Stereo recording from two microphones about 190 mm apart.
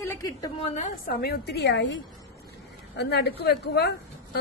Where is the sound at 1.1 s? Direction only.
60° left (ahead or behind).